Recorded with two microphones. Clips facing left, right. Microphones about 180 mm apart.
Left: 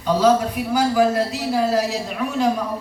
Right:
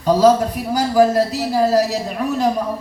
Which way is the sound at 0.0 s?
40° right (ahead or behind).